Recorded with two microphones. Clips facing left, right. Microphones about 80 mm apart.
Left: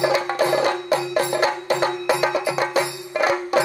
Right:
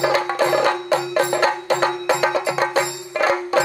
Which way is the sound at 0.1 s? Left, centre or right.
Right.